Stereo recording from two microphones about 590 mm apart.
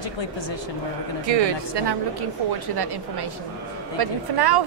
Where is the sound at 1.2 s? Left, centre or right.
Right.